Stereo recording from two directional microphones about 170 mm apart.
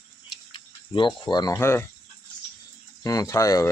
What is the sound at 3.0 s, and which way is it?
Speech, 20° left (ahead or behind).